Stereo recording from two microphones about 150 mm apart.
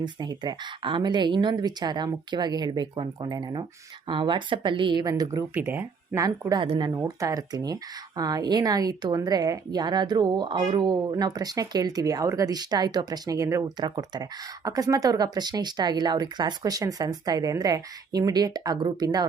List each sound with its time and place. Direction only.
0.0 s speech: 30° right (ahead or behind)
5.5 s speech: 15° right (ahead or behind)
6.2 s speech: 25° right (ahead or behind)
6.9 s speech: 20° right (ahead or behind)